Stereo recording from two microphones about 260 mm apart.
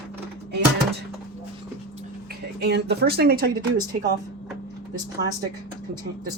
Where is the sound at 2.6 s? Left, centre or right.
Right.